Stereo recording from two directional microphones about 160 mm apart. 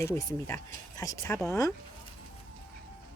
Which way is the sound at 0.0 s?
15° left (ahead or behind).